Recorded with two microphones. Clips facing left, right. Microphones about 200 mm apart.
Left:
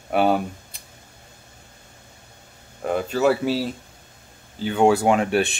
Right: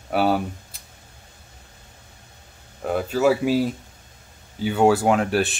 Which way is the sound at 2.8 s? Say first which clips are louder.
Even; 5° right (ahead or behind).